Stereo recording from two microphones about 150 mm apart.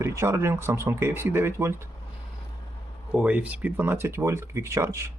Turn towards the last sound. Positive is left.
turn(degrees=-20)  # may be behind; listen again after turning